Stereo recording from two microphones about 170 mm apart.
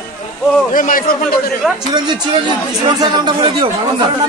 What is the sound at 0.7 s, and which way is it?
Speech, 55° left (ahead or behind).